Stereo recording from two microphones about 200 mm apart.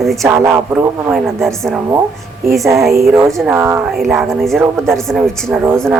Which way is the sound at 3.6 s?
15° right (ahead or behind).